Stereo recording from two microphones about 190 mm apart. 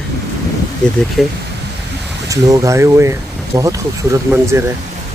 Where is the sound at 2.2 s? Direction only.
15° right (ahead or behind).